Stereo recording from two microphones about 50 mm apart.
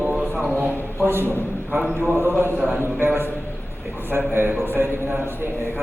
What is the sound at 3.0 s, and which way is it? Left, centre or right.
A man's voice, right.